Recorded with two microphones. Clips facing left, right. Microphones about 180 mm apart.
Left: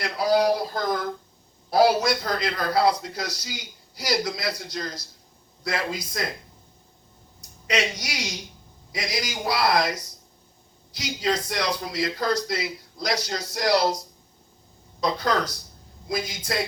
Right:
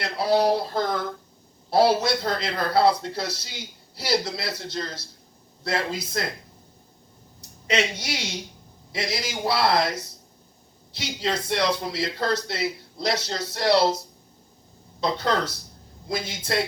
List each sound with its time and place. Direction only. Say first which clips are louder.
0.0 s a man's voice: even; 30° right (ahead or behind)
7.7 s a man's voice: right 1 dB; 25° right (ahead or behind)
15.0 s a man's voice: even; 30° right (ahead or behind)